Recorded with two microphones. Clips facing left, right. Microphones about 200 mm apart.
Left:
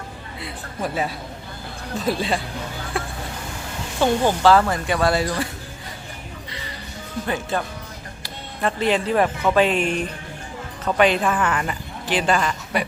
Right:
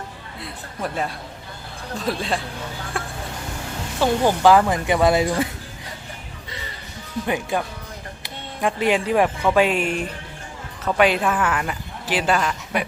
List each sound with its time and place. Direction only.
0.3 s a woman's voice: centre (ahead or behind)
2.9 s a sound: centre (ahead or behind)
4.0 s speech: 10° right (ahead or behind)
7.3 s a woman's voice: 15° right (ahead or behind)